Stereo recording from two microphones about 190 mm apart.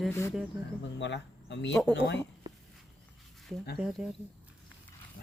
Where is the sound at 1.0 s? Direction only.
70° left (ahead or behind).